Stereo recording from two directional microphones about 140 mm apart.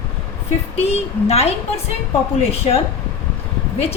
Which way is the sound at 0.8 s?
45° left (ahead or behind).